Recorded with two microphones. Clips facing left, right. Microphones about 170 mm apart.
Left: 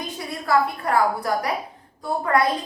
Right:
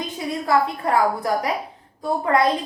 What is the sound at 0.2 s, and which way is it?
A woman's voice, 20° right (ahead or behind).